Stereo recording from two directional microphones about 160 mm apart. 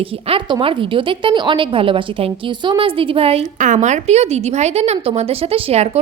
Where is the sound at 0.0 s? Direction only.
35° right (ahead or behind).